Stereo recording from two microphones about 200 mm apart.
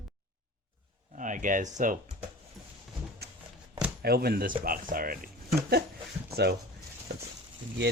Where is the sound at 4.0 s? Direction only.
50° right (ahead or behind).